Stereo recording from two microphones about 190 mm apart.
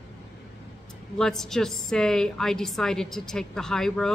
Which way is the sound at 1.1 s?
5° left (ahead or behind).